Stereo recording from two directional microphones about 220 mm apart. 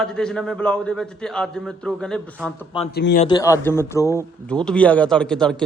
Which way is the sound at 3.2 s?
15° left (ahead or behind).